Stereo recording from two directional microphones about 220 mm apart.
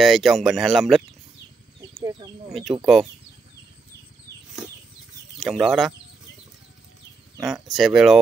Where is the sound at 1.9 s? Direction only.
20° right (ahead or behind).